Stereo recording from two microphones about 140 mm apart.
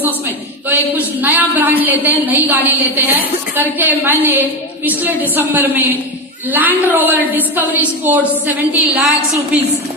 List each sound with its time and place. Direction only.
0.7 s a woman's voice: 10° right (ahead or behind)